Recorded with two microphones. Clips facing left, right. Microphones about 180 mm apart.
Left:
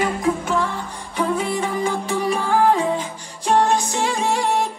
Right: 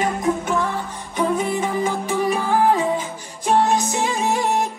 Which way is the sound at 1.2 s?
20° right (ahead or behind).